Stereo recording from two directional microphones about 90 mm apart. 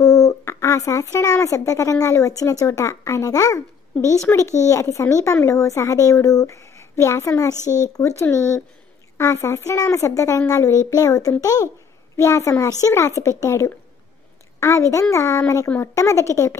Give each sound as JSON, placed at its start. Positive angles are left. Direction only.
{"t": 0.0, "sound": "a child's voice", "side_deg": 40}
{"t": 9.2, "sound": "a child's voice", "side_deg": 30}